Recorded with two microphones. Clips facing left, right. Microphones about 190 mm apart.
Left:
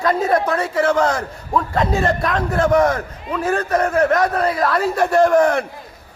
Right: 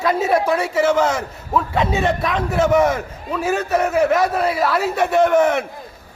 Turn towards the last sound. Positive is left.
turn(degrees=-5)  # may be behind; listen again after turning